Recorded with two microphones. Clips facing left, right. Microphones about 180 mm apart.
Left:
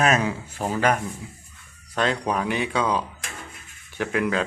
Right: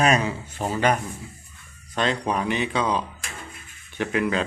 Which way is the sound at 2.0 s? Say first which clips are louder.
Even; 5° left (ahead or behind).